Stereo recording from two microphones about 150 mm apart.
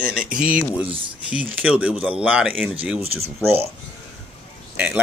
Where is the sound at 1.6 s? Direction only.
10° right (ahead or behind).